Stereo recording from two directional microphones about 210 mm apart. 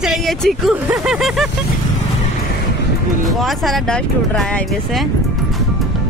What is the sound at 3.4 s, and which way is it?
Speech, centre (ahead or behind).